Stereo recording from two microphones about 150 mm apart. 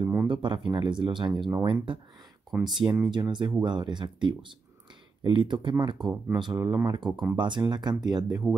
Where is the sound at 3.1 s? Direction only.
30° right (ahead or behind).